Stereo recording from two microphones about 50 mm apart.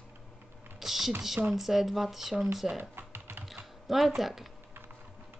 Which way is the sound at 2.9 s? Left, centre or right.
Right.